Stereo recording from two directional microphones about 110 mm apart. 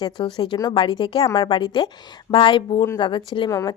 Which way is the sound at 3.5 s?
30° left (ahead or behind).